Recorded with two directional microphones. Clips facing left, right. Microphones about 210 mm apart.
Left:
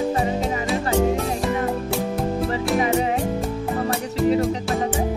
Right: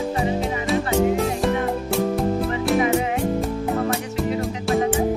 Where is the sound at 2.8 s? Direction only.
35° left (ahead or behind).